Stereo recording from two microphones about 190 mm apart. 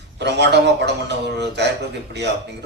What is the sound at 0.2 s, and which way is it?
A man's voice, 60° right (ahead or behind).